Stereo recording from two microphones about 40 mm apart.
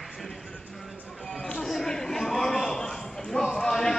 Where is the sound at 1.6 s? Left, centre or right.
Centre.